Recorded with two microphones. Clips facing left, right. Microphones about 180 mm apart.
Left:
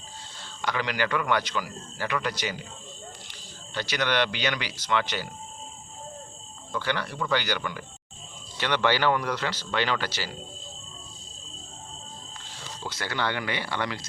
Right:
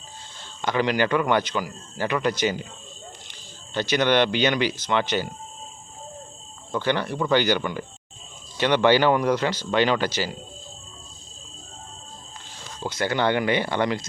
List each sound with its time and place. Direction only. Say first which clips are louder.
0.6 s a man's voice: right 6 dB; 20° right (ahead or behind)
3.8 s a man's voice: right 6 dB; 20° right (ahead or behind)
6.7 s a man's voice: right 6 dB; 20° right (ahead or behind)
12.8 s a man's voice: right 7 dB; 20° right (ahead or behind)